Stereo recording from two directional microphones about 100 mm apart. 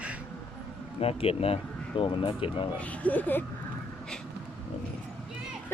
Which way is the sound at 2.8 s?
15° left (ahead or behind).